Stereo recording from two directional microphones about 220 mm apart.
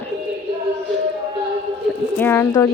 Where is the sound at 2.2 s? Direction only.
10° left (ahead or behind).